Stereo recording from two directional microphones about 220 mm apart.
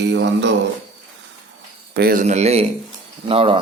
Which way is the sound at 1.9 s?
45° right (ahead or behind).